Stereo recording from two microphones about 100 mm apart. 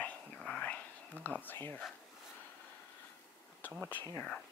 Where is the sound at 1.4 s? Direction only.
20° left (ahead or behind).